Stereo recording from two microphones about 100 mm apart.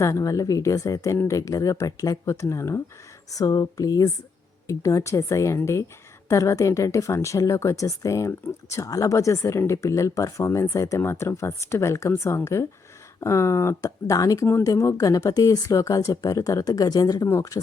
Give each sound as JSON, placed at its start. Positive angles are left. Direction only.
{"t": 0.0, "sound": "speech", "side_deg": 35}